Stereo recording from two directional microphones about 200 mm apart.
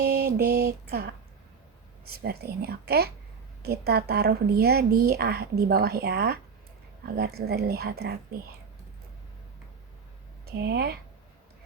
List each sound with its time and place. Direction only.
0.0 s mantra: 50° right (ahead or behind)
2.0 s a woman's voice: 50° right (ahead or behind)
10.4 s speech: 55° right (ahead or behind)